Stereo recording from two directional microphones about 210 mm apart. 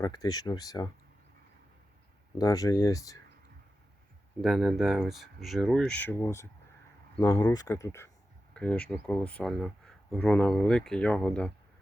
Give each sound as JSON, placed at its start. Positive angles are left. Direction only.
{"t": 0.0, "sound": "speech", "side_deg": 20}
{"t": 2.4, "sound": "speech", "side_deg": 15}
{"t": 4.4, "sound": "speech", "side_deg": 0}